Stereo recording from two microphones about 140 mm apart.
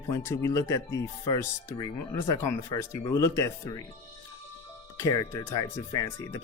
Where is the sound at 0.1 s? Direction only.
20° left (ahead or behind).